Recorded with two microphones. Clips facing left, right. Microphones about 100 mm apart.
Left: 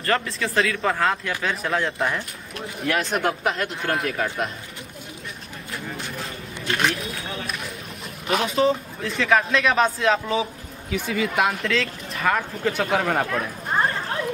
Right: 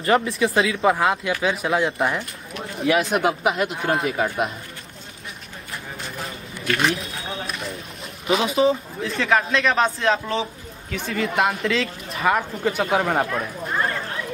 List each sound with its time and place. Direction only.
0.0 s speech: 15° right (ahead or behind)
6.8 s run: centre (ahead or behind)
8.3 s speech: 5° right (ahead or behind)